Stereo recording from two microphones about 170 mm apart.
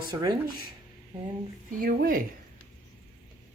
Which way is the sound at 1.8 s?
55° right (ahead or behind).